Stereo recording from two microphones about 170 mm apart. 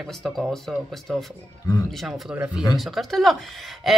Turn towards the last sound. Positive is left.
turn(degrees=0)  # may be behind; listen again after turning